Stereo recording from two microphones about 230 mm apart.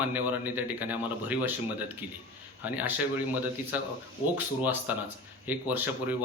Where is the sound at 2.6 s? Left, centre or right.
Centre.